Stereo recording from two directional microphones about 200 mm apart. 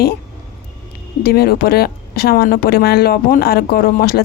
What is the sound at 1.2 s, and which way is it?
A woman's voice, 50° left (ahead or behind).